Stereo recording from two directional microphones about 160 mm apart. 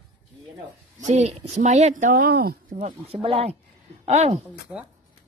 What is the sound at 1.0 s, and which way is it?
Speech, 45° right (ahead or behind).